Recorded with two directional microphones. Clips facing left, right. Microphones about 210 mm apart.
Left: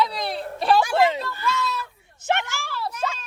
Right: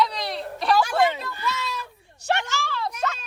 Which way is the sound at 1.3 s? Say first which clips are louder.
Left 3 dB; 15° right (ahead or behind).